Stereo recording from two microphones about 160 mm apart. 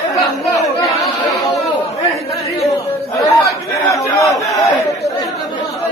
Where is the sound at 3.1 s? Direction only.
20° left (ahead or behind).